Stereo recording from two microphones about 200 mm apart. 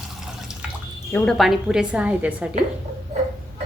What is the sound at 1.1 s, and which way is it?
A woman's voice, centre (ahead or behind).